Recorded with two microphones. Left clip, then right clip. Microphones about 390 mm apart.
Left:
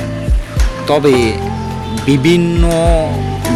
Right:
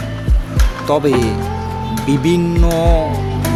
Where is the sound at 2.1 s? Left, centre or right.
Right.